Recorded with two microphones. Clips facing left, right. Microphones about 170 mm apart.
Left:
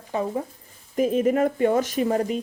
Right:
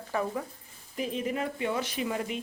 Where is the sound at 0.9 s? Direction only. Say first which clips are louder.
Left 11 dB; 45° left (ahead or behind).